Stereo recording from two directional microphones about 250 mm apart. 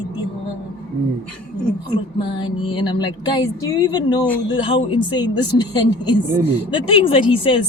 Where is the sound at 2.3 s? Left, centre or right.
Centre.